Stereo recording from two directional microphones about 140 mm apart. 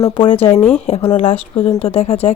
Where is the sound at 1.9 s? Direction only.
50° left (ahead or behind).